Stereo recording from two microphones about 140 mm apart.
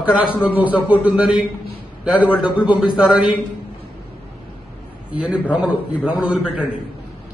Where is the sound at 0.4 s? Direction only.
10° right (ahead or behind).